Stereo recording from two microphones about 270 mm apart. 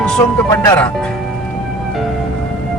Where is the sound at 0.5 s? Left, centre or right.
Centre.